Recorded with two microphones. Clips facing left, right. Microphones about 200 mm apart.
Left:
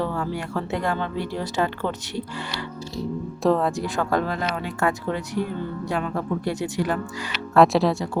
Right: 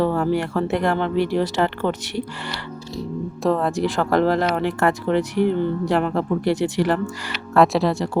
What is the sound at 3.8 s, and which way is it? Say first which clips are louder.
Speech: right 5 dB; 80° right.